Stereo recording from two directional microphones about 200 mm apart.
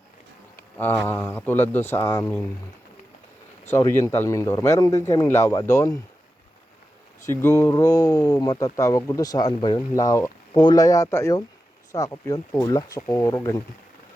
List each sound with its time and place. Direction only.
0.8 s speech: 10° left (ahead or behind)
3.7 s speech: 15° left (ahead or behind)
7.3 s speech: 15° left (ahead or behind)